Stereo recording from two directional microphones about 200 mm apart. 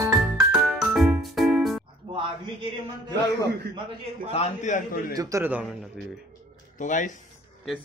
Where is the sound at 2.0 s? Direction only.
25° right (ahead or behind).